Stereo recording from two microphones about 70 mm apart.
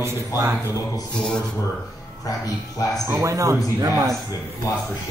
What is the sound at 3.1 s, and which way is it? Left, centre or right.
A man's voice, right.